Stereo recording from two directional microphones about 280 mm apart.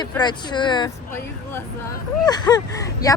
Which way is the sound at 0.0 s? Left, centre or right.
Centre.